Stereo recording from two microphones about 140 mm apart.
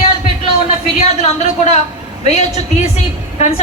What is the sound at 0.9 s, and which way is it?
Speech, 50° left (ahead or behind).